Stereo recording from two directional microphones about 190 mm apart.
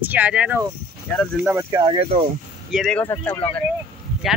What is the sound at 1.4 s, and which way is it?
Speech, 20° right (ahead or behind).